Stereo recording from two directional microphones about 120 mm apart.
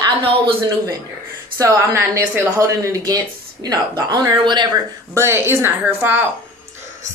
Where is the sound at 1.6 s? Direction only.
25° right (ahead or behind).